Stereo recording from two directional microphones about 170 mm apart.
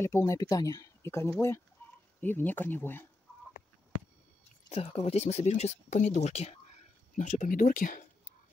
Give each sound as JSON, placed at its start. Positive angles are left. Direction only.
{"t": 0.0, "sound": "speech", "side_deg": 20}
{"t": 4.6, "sound": "speech", "side_deg": 35}